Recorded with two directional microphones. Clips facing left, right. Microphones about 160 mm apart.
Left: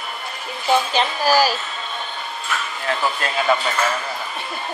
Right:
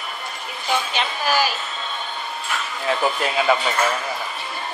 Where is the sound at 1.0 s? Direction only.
35° left (ahead or behind).